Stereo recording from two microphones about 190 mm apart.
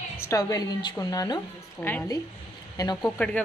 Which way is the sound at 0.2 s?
15° left (ahead or behind).